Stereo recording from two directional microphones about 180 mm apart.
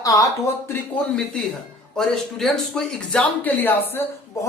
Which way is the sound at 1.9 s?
Centre (ahead or behind).